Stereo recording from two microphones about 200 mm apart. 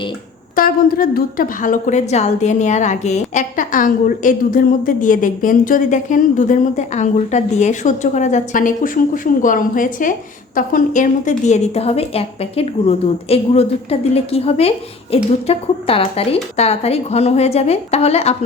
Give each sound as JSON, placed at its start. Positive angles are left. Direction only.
{"t": 0.5, "sound": "a woman's voice", "side_deg": 45}